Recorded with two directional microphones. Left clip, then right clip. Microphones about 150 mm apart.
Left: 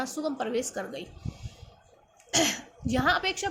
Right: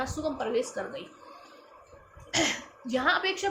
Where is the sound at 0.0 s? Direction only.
50° left (ahead or behind).